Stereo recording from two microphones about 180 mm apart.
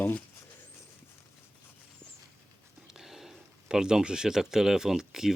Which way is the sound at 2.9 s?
Centre (ahead or behind).